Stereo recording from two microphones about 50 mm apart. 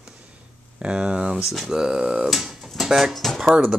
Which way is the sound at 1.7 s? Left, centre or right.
Centre.